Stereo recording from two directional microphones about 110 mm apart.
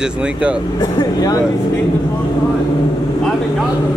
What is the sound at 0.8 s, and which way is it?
Speech, 35° left (ahead or behind).